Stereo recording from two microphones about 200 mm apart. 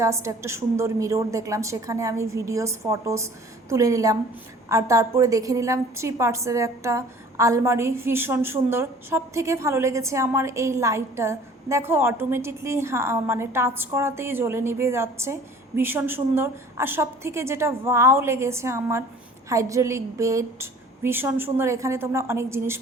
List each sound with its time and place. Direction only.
0.0 s a woman's voice: 15° right (ahead or behind)